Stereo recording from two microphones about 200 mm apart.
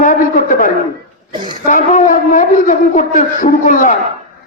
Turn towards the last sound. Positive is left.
turn(degrees=40)  # may be behind; listen again after turning